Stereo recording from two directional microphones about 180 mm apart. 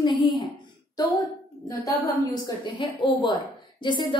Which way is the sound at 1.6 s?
20° left (ahead or behind).